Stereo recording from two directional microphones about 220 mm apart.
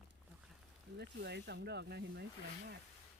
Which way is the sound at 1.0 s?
50° right (ahead or behind).